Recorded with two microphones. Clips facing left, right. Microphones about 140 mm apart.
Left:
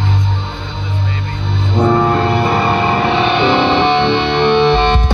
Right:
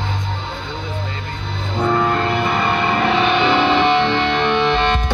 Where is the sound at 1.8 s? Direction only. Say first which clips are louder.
Left 5 dB; 30° left (ahead or behind).